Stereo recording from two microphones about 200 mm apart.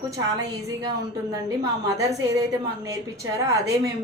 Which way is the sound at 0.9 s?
15° right (ahead or behind).